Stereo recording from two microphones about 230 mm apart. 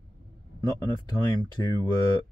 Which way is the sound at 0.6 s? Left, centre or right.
Centre.